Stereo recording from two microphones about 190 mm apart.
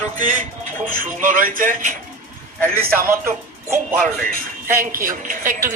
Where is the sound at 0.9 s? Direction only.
45° right (ahead or behind).